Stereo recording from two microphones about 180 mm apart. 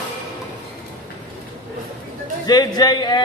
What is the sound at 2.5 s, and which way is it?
Speech, 20° left (ahead or behind).